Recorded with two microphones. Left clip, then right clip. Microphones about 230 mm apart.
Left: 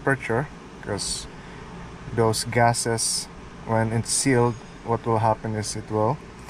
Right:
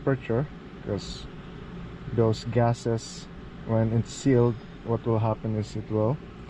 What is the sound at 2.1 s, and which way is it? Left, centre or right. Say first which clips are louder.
Speech: left 3 dB; left.